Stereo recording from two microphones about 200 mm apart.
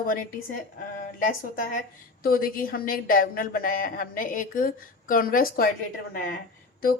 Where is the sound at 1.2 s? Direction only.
40° left (ahead or behind).